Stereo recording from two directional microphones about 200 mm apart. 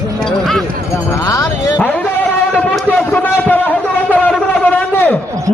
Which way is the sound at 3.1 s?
10° left (ahead or behind).